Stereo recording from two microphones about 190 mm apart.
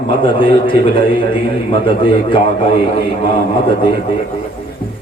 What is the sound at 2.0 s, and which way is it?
Speech, 25° left (ahead or behind).